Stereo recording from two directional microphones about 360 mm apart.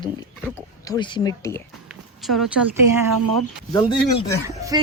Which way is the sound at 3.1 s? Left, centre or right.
Right.